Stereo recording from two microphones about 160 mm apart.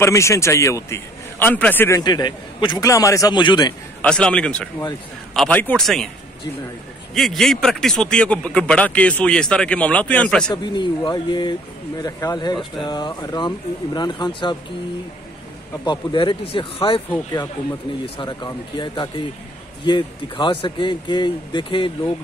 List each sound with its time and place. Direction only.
0.0 s a man's voice: 20° left (ahead or behind)
4.0 s a man's voice: 5° left (ahead or behind)
7.2 s speech: centre (ahead or behind)
10.5 s a man's voice: 25° left (ahead or behind)
15.8 s speech: 30° left (ahead or behind)
18.0 s a man's voice: 30° left (ahead or behind)